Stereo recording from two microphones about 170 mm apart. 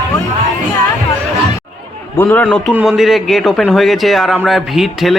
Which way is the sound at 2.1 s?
10° left (ahead or behind).